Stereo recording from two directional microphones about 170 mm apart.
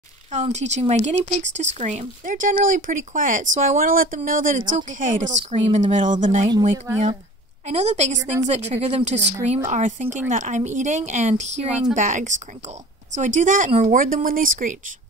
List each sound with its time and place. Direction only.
0.3 s speech: 45° right (ahead or behind)
7.6 s speech: 40° right (ahead or behind)